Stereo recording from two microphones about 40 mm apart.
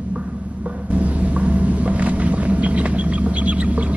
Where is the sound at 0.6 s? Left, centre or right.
Right.